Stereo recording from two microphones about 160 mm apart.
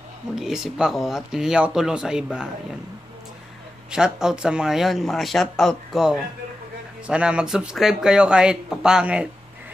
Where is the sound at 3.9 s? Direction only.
5° right (ahead or behind).